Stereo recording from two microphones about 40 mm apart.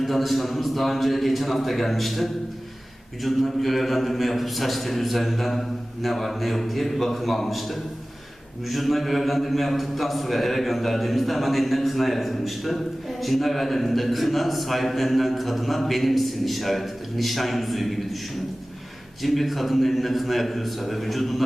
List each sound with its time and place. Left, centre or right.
0.0 s a man's voice: centre
19.2 s a man's voice: centre